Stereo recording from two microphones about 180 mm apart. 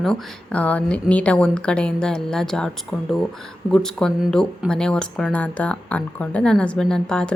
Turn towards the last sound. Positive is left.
turn(degrees=5)  # may be behind; listen again after turning